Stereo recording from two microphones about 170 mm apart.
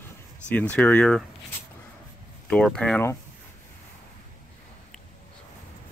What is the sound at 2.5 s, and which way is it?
Speech, 5° left (ahead or behind).